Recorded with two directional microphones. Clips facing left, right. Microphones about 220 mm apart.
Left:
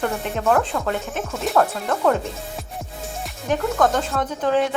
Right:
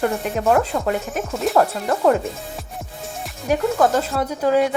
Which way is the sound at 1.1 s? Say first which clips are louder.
Right 3 dB; centre (ahead or behind).